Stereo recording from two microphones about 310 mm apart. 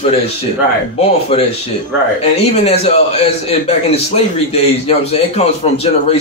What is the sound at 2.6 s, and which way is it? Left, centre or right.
A man's voice, centre.